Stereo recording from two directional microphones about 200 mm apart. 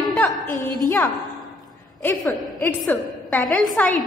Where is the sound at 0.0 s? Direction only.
5° left (ahead or behind).